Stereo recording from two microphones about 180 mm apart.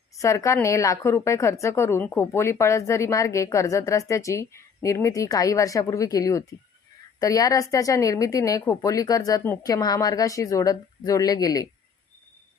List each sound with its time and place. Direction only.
0.2 s a woman's voice: 15° left (ahead or behind)